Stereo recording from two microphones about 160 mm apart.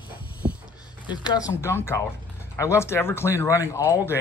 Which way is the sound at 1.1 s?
25° left (ahead or behind).